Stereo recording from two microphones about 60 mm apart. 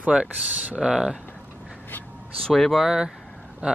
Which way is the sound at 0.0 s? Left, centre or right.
Right.